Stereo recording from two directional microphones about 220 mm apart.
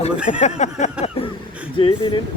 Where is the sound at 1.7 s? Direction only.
25° left (ahead or behind).